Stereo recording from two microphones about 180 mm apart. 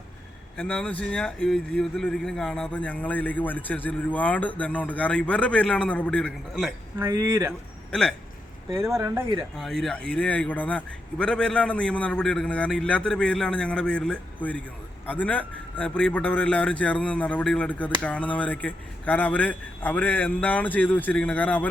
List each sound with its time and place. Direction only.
0.5 s a man's voice: 5° left (ahead or behind)
7.0 s speech: 15° right (ahead or behind)
7.9 s speech: 5° left (ahead or behind)
9.0 s speech: 20° right (ahead or behind)
9.6 s a man's voice: centre (ahead or behind)